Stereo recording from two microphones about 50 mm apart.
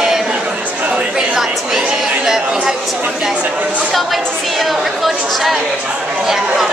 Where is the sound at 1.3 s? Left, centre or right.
Centre.